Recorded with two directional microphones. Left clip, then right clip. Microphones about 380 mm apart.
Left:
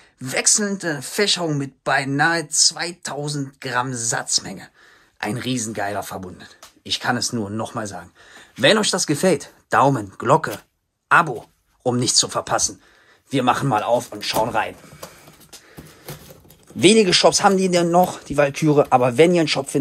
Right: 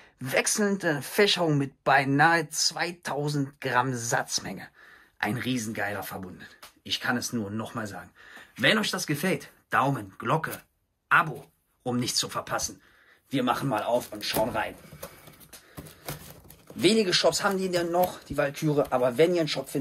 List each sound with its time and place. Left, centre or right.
0.2 s speech: centre
16.8 s speech: centre